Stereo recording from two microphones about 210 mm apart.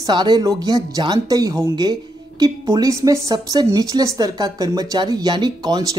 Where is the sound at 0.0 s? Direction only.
20° right (ahead or behind).